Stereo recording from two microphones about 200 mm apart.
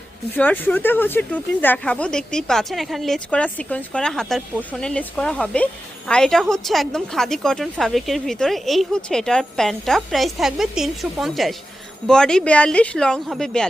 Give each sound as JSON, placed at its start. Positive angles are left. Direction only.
{"t": 0.3, "sound": "a woman's voice", "side_deg": 10}